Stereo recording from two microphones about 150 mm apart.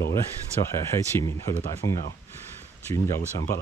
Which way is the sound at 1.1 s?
20° left (ahead or behind).